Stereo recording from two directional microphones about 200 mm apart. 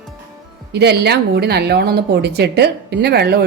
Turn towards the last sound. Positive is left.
turn(degrees=-55)  # may be behind; listen again after turning